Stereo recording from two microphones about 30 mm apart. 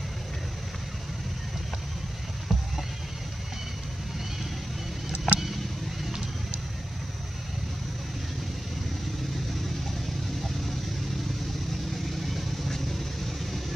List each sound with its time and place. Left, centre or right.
5.1 s vehicle: right
12.2 s vehicle: centre